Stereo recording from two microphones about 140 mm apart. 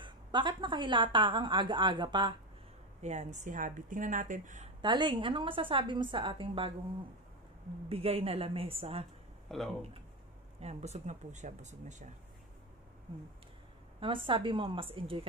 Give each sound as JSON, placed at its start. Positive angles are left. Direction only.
{"t": 0.0, "sound": "a woman's voice", "side_deg": -35}
{"t": 3.0, "sound": "a woman's voice", "side_deg": -55}
{"t": 4.8, "sound": "a woman's voice", "side_deg": -35}
{"t": 7.9, "sound": "a woman's voice", "side_deg": -45}
{"t": 9.5, "sound": "speech", "side_deg": 0}
{"t": 10.6, "sound": "a woman's voice", "side_deg": -50}
{"t": 13.9, "sound": "a woman's voice", "side_deg": -40}